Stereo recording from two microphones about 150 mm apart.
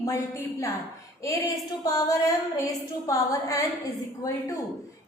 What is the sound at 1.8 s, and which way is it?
A woman's voice, 25° left (ahead or behind).